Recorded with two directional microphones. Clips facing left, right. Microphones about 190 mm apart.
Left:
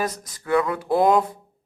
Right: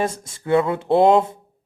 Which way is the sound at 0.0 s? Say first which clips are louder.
Right 3 dB; 25° right (ahead or behind).